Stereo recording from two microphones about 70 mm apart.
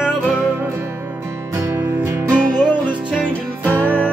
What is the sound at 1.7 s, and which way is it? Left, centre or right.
Music, right.